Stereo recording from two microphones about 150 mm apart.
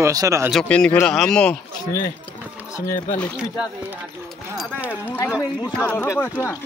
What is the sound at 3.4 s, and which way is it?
Speech, 5° right (ahead or behind).